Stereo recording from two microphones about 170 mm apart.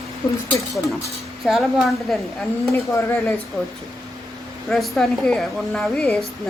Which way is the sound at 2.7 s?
10° left (ahead or behind).